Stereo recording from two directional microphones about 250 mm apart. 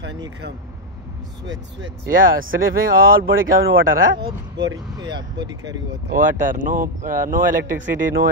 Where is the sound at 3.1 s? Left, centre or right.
Right.